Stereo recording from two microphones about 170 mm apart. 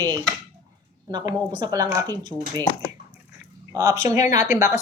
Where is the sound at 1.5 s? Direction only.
25° right (ahead or behind).